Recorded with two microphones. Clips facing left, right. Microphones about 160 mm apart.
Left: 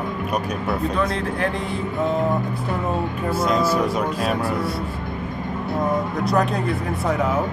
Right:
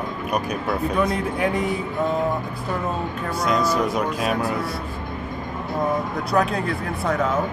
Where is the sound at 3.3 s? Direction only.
5° left (ahead or behind).